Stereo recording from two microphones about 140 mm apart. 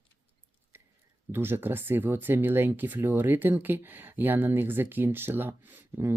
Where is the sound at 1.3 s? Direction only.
15° right (ahead or behind).